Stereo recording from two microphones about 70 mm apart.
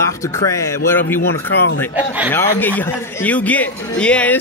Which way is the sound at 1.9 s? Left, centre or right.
Right.